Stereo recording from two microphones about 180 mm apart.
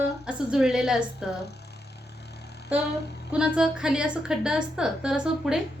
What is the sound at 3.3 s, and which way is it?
A woman's voice, 5° right (ahead or behind).